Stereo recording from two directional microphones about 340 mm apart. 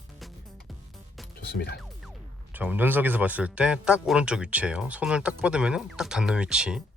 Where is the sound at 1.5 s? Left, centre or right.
Left.